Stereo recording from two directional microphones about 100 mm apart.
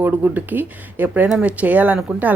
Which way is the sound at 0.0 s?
15° right (ahead or behind).